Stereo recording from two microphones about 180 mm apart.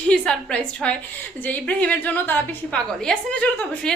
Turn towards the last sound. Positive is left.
turn(degrees=10)  # may be behind; listen again after turning